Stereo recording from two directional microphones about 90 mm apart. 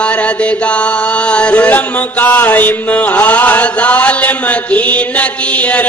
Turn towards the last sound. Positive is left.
turn(degrees=15)  # may be behind; listen again after turning